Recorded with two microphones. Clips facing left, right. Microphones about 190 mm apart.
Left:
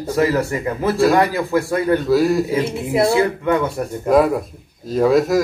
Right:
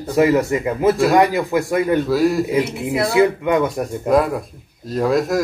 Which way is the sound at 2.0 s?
Centre (ahead or behind).